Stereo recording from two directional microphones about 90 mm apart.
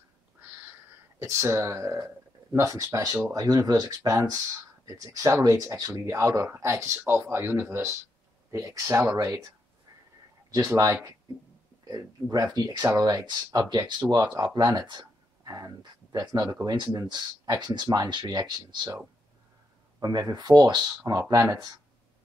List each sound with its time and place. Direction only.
1.2 s speech: 35° right (ahead or behind)
10.5 s speech: 40° right (ahead or behind)
11.9 s speech: 45° right (ahead or behind)
14.1 s speech: 50° right (ahead or behind)
20.0 s speech: 45° right (ahead or behind)
21.2 s speech: 35° right (ahead or behind)